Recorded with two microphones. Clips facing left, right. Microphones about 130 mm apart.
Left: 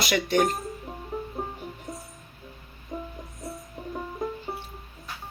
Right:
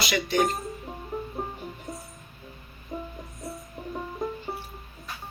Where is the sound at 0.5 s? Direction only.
Centre (ahead or behind).